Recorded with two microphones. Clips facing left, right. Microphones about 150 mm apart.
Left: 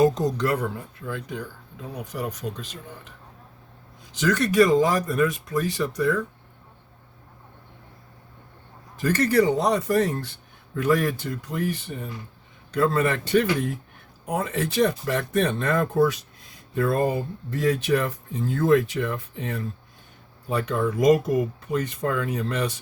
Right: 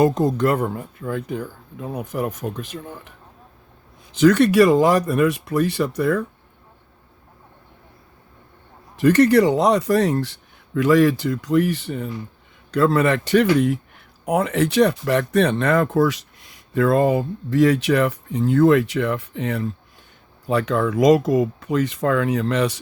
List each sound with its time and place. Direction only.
0.0 s speech: 55° right (ahead or behind)
4.2 s speech: 65° right (ahead or behind)
9.0 s a man's voice: 70° right (ahead or behind)
20.5 s speech: 85° right